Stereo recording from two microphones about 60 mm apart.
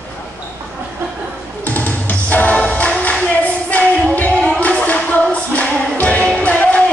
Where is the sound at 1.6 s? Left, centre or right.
Left.